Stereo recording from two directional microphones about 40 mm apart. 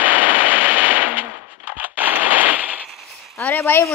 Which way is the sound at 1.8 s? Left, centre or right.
Right.